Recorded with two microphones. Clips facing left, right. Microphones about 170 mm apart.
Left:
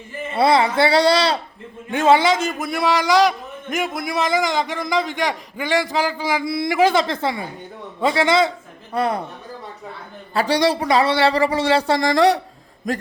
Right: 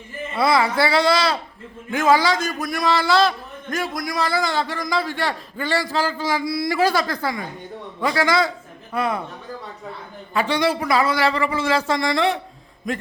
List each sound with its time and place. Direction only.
0.3 s a man's voice: 30° left (ahead or behind)
10.3 s speech: 35° left (ahead or behind)
12.9 s a sound: 45° left (ahead or behind)